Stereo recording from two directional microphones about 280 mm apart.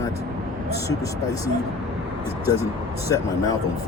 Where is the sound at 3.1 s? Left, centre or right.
Centre.